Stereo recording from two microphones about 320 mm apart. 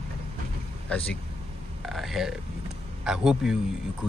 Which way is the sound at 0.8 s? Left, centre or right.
Centre.